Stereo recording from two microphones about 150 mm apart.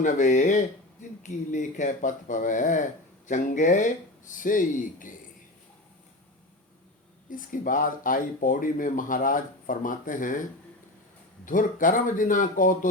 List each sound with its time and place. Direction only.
0.0 s speech: 55° left (ahead or behind)
7.3 s speech: 65° left (ahead or behind)
11.4 s speech: 60° left (ahead or behind)